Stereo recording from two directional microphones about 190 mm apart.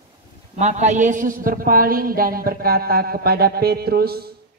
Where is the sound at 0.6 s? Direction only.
35° right (ahead or behind); by 4.4 s 55° right (ahead or behind).